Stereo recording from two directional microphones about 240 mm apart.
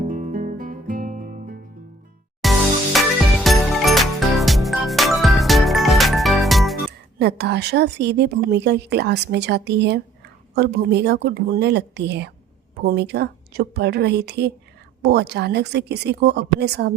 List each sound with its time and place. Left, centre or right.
0.0 s guitar: right
2.4 s music: centre
7.2 s a woman's voice: right